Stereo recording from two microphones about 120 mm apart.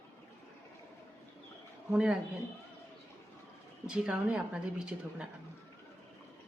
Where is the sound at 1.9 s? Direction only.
5° right (ahead or behind).